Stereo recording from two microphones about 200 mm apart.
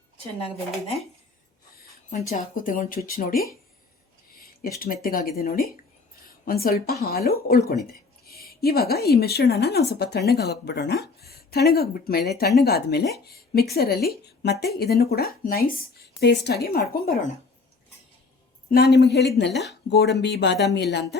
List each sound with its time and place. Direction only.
0.3 s speech: 30° left (ahead or behind)
2.3 s a woman's voice: 45° left (ahead or behind)
4.8 s a woman's voice: 45° left (ahead or behind)
18.7 s speech: 55° left (ahead or behind)